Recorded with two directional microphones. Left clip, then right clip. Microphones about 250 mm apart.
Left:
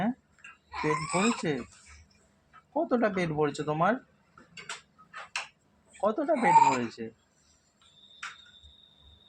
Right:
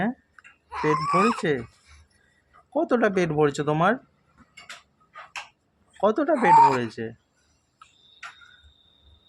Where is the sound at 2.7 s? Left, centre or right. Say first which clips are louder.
Right 5 dB; right.